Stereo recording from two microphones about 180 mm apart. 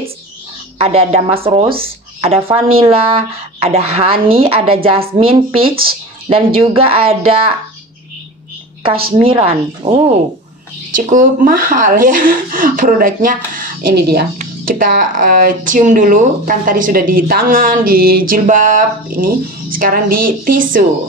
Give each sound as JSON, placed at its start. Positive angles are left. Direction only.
{"t": 0.7, "sound": "speech", "side_deg": -35}
{"t": 5.7, "sound": "speech", "side_deg": -55}
{"t": 6.2, "sound": "speech", "side_deg": -30}
{"t": 9.1, "sound": "speech", "side_deg": -30}
{"t": 11.0, "sound": "speech", "side_deg": -45}
{"t": 14.4, "sound": "speech", "side_deg": -50}